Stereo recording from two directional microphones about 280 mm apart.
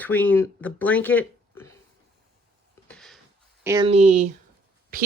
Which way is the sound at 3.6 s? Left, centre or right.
Centre.